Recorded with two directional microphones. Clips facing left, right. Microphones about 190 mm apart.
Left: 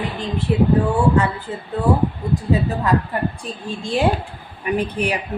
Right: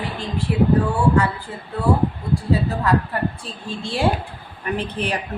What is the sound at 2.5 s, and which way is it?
A woman's voice, 20° left (ahead or behind).